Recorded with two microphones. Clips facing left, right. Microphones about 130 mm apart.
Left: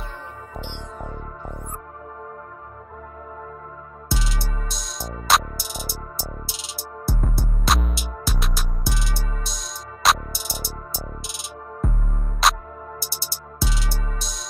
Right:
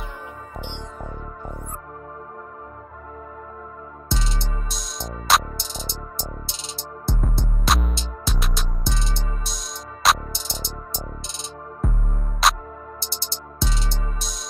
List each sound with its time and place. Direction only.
4.4 s music: 5° left (ahead or behind)
8.9 s music: 25° right (ahead or behind)
9.3 s music: centre (ahead or behind)